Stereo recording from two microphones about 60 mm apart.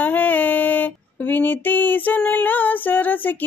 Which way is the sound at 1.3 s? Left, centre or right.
Left.